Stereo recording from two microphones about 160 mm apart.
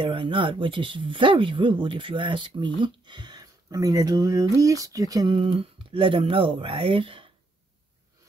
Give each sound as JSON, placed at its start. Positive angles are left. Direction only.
{"t": 0.0, "sound": "speech", "side_deg": -30}